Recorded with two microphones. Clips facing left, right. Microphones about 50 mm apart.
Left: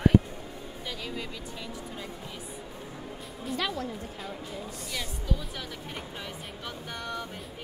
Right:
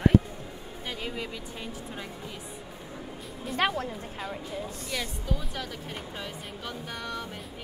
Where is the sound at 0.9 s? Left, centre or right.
Right.